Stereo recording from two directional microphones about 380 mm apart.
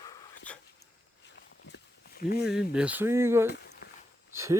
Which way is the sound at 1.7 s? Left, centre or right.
Left.